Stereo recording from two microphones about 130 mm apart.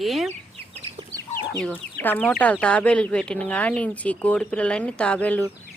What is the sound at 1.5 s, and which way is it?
Speech, 5° left (ahead or behind).